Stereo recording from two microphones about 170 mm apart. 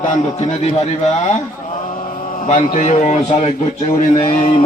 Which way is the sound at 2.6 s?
40° left (ahead or behind).